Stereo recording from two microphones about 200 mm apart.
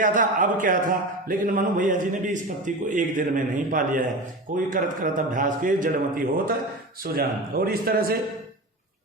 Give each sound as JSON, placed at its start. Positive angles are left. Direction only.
{"t": 0.0, "sound": "a man's voice", "side_deg": -40}